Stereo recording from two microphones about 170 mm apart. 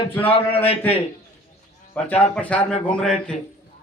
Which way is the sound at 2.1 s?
10° left (ahead or behind).